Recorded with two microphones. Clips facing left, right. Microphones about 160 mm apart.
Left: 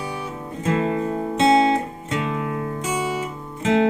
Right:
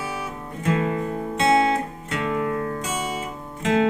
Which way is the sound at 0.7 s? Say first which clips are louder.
Left 2 dB; 25° left (ahead or behind).